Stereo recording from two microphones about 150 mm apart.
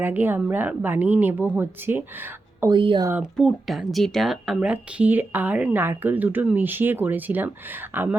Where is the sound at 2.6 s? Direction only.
35° right (ahead or behind).